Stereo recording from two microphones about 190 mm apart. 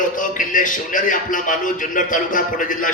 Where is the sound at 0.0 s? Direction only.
45° left (ahead or behind).